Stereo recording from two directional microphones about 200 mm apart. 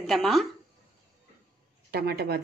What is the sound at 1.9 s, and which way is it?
Speech, 50° right (ahead or behind).